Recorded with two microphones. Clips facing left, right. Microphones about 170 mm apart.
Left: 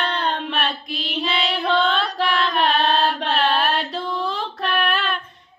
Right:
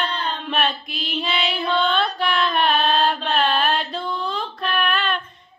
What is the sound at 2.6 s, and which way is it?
Mantra, 75° left (ahead or behind).